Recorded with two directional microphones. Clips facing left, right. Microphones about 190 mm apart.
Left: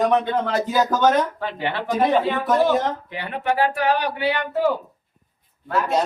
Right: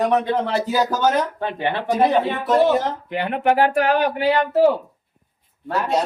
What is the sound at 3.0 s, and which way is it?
Speech, 55° right (ahead or behind).